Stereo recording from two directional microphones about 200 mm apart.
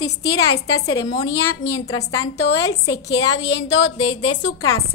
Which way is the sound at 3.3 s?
65° left (ahead or behind).